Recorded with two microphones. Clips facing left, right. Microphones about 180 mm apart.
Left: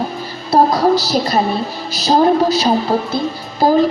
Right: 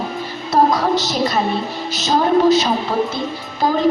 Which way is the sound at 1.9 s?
35° left (ahead or behind).